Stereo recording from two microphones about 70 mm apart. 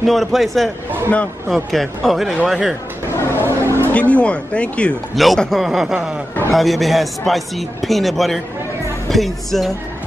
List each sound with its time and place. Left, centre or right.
0.0 s a man's voice: centre
3.3 s a sound: right
3.9 s speech: centre
5.1 s a man's voice: centre